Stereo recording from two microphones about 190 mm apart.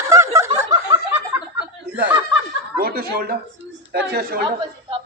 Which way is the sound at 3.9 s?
55° right (ahead or behind).